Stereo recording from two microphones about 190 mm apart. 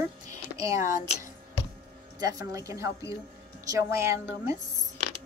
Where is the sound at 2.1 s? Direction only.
20° right (ahead or behind).